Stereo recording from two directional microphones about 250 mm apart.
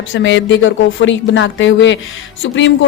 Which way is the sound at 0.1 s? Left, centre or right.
Left.